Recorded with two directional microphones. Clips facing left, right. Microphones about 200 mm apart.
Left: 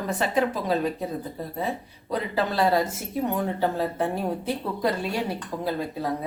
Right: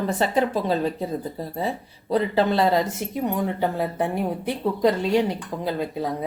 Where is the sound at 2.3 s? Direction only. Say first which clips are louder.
Right 1 dB; 25° right (ahead or behind).